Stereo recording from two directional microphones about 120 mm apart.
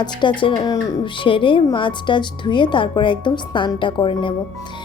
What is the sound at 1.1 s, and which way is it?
Speech, 45° left (ahead or behind).